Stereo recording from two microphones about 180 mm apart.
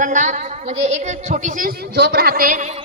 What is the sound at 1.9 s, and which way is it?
Speech, 65° right (ahead or behind).